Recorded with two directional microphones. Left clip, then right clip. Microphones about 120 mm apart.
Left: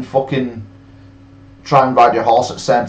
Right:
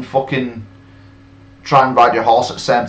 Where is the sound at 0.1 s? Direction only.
5° right (ahead or behind).